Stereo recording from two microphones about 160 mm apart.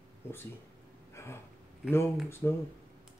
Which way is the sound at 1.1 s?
15° left (ahead or behind).